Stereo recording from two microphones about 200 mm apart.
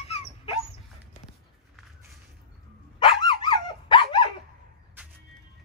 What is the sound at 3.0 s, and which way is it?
Dog, 25° left (ahead or behind).